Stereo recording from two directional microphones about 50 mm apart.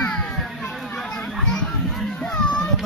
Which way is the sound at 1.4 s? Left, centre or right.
Centre.